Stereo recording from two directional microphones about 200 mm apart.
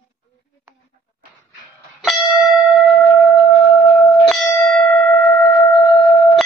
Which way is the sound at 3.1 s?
10° left (ahead or behind).